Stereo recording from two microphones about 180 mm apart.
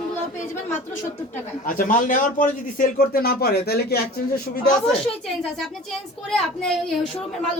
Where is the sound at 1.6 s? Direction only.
50° left (ahead or behind).